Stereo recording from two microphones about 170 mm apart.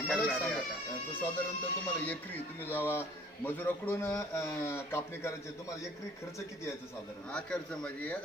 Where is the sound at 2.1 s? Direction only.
10° left (ahead or behind).